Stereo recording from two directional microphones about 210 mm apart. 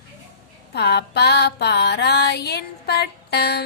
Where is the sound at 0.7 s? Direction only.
50° left (ahead or behind).